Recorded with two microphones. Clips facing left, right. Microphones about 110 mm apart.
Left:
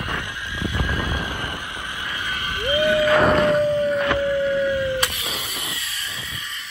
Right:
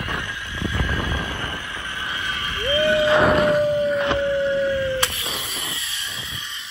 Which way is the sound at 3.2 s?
Centre (ahead or behind).